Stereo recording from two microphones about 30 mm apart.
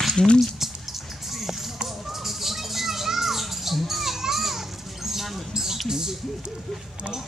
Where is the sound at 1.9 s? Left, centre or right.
Centre.